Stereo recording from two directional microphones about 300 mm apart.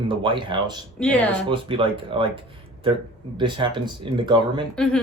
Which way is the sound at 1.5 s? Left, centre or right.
Centre.